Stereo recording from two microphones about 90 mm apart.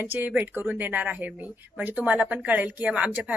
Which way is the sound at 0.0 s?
20° right (ahead or behind).